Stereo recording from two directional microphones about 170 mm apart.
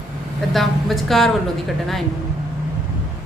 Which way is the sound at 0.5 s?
Centre (ahead or behind).